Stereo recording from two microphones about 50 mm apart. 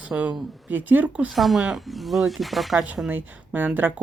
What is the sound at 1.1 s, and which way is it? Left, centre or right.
Speech, right.